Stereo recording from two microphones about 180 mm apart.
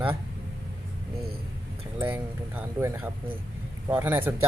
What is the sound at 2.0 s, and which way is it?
Speech, 10° right (ahead or behind).